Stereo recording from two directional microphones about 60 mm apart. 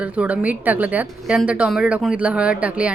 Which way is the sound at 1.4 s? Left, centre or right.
Centre.